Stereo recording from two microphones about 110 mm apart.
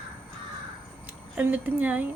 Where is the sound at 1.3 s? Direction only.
15° right (ahead or behind).